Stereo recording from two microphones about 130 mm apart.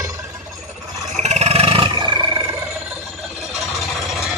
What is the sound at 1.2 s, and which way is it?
Roar, 55° right (ahead or behind).